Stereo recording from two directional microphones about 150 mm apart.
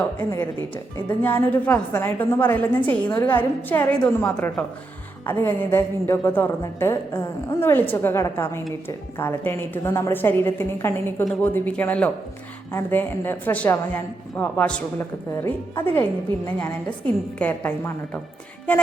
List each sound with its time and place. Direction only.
0.0 s a woman's voice: 10° left (ahead or behind)